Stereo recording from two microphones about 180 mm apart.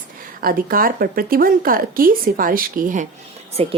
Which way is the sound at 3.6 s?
35° right (ahead or behind).